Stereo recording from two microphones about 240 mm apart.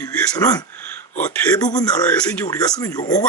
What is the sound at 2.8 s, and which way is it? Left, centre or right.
Speech, centre.